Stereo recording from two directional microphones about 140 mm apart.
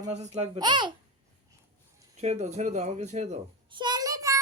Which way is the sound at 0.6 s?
35° right (ahead or behind).